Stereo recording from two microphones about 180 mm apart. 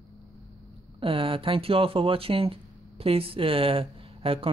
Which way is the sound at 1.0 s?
30° right (ahead or behind).